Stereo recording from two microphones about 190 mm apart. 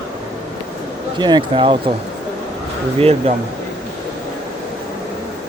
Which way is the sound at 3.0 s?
35° right (ahead or behind).